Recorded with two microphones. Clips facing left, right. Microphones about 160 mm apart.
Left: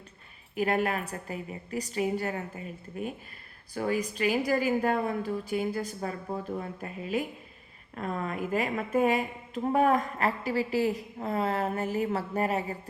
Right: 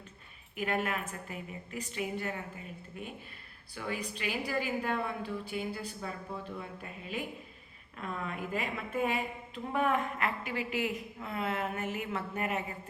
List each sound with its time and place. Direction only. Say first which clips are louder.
0.5 s a woman's voice: left 6 dB; 40° left (ahead or behind)
3.8 s a woman's voice: left 9 dB; 40° left (ahead or behind)